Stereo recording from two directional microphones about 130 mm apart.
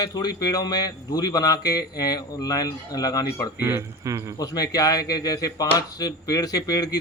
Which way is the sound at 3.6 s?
20° right (ahead or behind).